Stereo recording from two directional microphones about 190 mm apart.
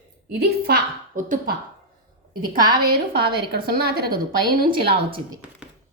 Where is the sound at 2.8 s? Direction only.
55° right (ahead or behind).